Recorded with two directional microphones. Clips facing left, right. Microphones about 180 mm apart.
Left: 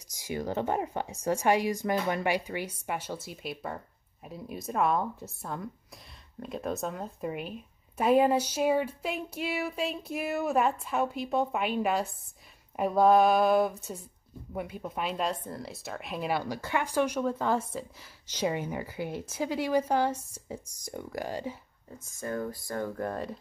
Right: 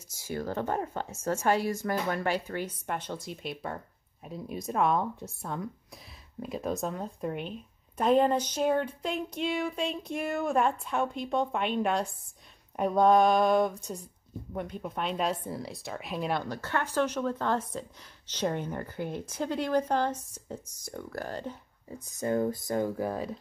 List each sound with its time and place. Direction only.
0.1 s speech: 15° left (ahead or behind)
22.1 s speech: 20° right (ahead or behind); by 23.4 s centre (ahead or behind)